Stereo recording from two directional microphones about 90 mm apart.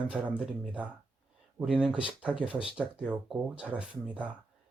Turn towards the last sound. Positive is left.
turn(degrees=-15)  # may be behind; listen again after turning